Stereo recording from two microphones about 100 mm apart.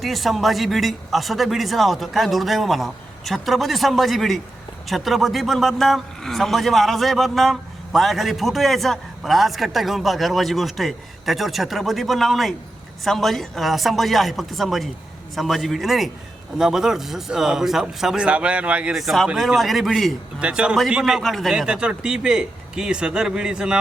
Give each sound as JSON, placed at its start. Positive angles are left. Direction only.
{"t": 0.0, "sound": "a man's voice", "side_deg": 0}